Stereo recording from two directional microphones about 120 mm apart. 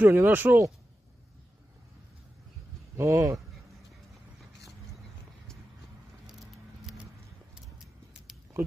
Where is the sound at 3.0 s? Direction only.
25° right (ahead or behind).